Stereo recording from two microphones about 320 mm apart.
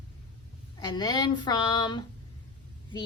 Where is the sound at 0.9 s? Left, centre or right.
Centre.